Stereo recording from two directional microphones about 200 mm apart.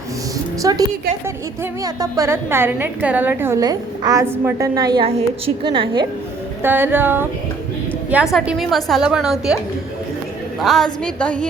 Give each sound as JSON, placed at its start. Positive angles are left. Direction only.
{"t": 0.6, "sound": "a woman's voice", "side_deg": -20}
{"t": 6.6, "sound": "a woman's voice", "side_deg": -10}
{"t": 10.6, "sound": "a woman's voice", "side_deg": 0}